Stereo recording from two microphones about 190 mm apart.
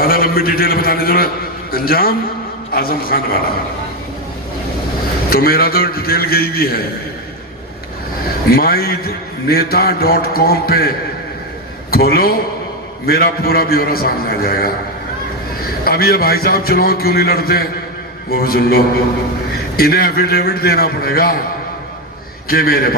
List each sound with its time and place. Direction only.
0.0 s a man's voice: 50° left (ahead or behind)
5.3 s a man's voice: 55° left (ahead or behind)
8.4 s a man's voice: 50° left (ahead or behind)
15.8 s a man's voice: 50° left (ahead or behind)
22.4 s a man's voice: 50° left (ahead or behind)